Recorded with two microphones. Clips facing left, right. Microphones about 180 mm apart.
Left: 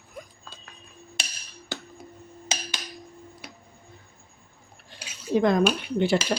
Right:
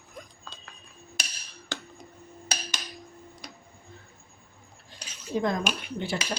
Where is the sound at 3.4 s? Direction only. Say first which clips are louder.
Right 1 dB; 5° left (ahead or behind).